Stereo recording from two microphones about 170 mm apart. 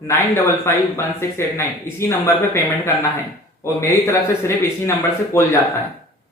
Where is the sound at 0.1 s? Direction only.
15° left (ahead or behind).